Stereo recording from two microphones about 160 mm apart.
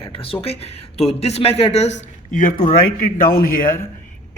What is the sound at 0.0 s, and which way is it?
Whispering, 35° left (ahead or behind).